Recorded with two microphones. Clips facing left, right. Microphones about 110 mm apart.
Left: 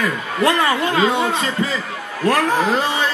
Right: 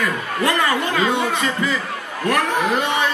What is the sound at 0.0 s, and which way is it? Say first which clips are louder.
A man's voice: left 2 dB; 25° left (ahead or behind).